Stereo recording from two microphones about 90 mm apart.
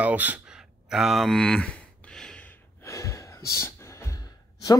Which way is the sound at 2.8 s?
35° left (ahead or behind).